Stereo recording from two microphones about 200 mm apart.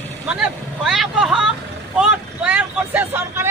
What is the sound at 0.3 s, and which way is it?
Speech, 5° right (ahead or behind).